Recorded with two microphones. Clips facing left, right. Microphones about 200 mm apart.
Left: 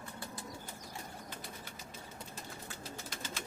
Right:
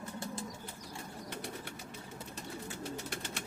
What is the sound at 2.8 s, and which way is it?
Bird, 65° right (ahead or behind).